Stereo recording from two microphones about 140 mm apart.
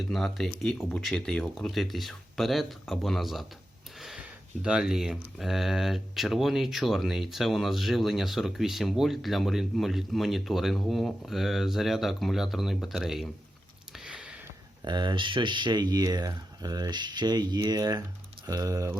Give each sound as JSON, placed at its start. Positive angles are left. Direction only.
{"t": 0.0, "sound": "speech", "side_deg": 0}
{"t": 4.6, "sound": "speech", "side_deg": -5}
{"t": 13.9, "sound": "a sound", "side_deg": -5}
{"t": 14.8, "sound": "speech", "side_deg": -30}